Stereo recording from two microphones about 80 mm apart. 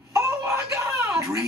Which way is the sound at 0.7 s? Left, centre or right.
Right.